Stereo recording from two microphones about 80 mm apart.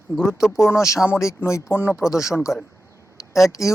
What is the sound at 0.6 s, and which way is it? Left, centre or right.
Speech, left.